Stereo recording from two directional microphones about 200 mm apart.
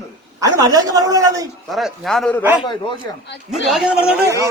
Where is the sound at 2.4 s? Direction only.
10° right (ahead or behind).